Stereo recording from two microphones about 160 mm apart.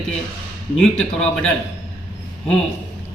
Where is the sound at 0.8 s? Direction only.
5° left (ahead or behind).